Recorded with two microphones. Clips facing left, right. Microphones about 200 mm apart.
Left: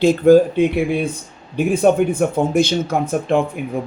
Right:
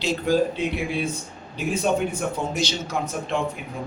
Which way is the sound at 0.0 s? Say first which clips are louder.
Left 11 dB; 50° left (ahead or behind).